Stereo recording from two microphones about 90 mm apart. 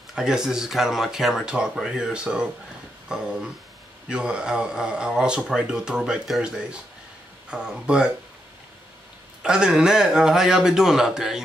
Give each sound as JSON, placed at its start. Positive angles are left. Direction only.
{"t": 0.1, "sound": "speech", "side_deg": -5}
{"t": 3.1, "sound": "a sound", "side_deg": -10}
{"t": 4.1, "sound": "speech", "side_deg": -10}
{"t": 9.4, "sound": "speech", "side_deg": -10}